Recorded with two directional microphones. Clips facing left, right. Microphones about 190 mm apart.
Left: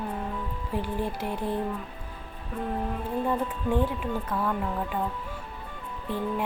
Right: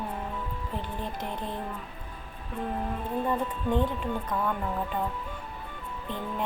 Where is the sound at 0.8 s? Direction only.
10° left (ahead or behind).